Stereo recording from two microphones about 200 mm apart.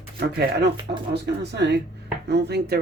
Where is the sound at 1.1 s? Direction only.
60° right (ahead or behind).